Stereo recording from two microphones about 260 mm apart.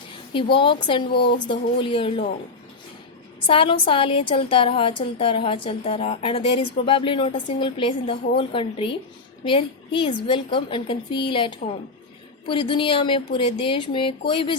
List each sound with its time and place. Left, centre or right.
0.5 s a woman's voice: centre
1.1 s speech: left
1.5 s a woman's voice: centre
3.4 s a woman's voice: centre